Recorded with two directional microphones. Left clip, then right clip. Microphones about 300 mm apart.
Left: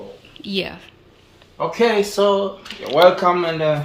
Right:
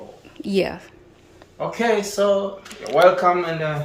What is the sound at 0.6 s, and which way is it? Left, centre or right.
Speech, centre.